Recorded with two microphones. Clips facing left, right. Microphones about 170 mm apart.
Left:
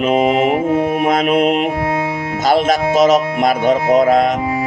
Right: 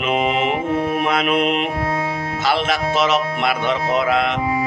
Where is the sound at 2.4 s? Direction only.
45° left (ahead or behind).